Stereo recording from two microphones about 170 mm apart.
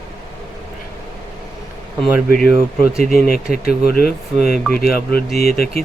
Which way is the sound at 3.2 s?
60° left (ahead or behind).